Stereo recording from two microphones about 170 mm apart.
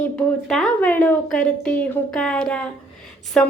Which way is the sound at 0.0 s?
5° left (ahead or behind).